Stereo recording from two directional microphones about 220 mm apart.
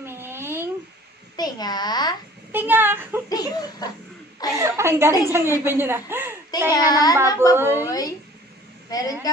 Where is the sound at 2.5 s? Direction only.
10° right (ahead or behind).